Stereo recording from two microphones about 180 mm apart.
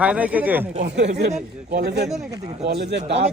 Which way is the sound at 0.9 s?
75° right (ahead or behind).